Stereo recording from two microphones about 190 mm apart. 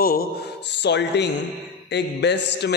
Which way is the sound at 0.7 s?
65° left (ahead or behind).